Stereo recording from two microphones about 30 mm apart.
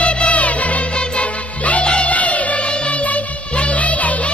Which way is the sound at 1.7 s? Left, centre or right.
Left.